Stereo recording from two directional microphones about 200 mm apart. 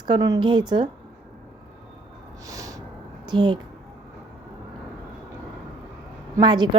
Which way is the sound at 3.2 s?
20° right (ahead or behind).